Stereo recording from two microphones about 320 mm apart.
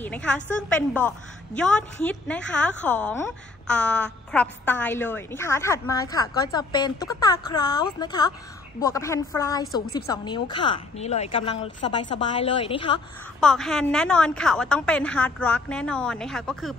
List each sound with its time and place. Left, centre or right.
0.0 s a woman's voice: centre
13.4 s a woman's voice: centre